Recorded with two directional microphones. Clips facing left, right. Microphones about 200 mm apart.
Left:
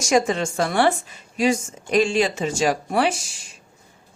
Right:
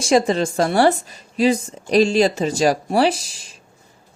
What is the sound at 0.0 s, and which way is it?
A woman's voice, 30° right (ahead or behind).